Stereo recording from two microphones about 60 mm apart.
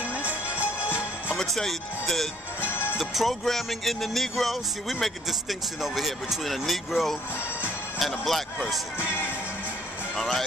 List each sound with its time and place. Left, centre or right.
0.0 s music: right
0.5 s music: left
1.3 s music: centre
2.6 s music: left
3.0 s music: centre
8.9 s music: left
10.1 s music: centre